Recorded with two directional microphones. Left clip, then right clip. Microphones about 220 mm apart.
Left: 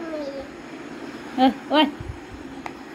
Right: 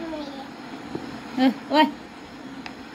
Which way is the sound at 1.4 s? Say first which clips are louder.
Left 1 dB; 50° right (ahead or behind).